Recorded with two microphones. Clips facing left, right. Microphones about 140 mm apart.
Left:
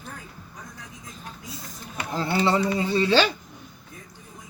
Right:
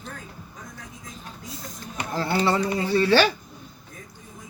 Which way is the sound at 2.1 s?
20° left (ahead or behind).